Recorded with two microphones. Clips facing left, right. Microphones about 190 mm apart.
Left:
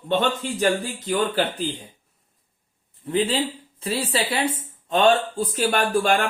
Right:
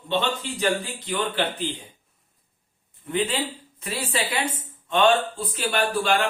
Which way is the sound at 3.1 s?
35° left (ahead or behind).